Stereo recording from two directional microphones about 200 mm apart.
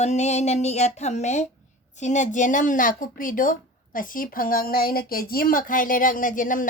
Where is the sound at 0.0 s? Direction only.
35° left (ahead or behind).